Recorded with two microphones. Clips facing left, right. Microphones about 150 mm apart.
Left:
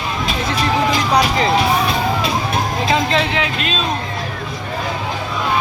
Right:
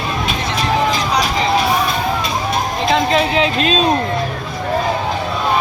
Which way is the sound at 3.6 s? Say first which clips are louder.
Right 6 dB; 35° right (ahead or behind).